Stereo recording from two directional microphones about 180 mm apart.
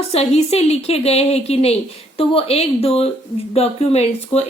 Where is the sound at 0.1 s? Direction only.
35° left (ahead or behind).